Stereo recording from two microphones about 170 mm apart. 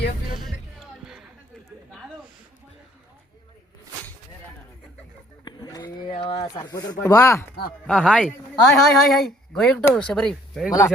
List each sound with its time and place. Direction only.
0.4 s music: centre (ahead or behind)
5.5 s a sound: 25° left (ahead or behind)
6.1 s speech: 30° left (ahead or behind)
7.9 s speech: 5° left (ahead or behind)
10.7 s speech: 20° left (ahead or behind)